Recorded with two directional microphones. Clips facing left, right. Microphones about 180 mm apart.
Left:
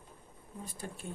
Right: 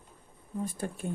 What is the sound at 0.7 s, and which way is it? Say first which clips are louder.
Speech: right 8 dB; 55° right (ahead or behind).